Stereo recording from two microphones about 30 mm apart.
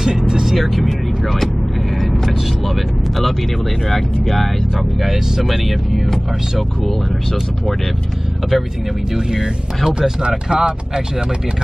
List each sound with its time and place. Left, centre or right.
0.3 s vehicle: centre
0.6 s speech: centre
3.9 s speech: centre
10.2 s speech: right